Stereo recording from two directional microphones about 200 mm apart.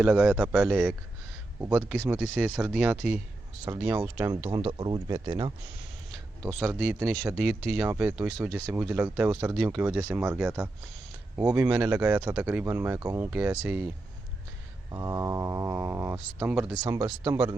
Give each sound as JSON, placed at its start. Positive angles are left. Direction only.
{"t": 0.0, "sound": "a man's voice", "side_deg": -5}
{"t": 4.4, "sound": "speech", "side_deg": -25}
{"t": 8.3, "sound": "a man's voice", "side_deg": 0}
{"t": 14.9, "sound": "speech", "side_deg": -15}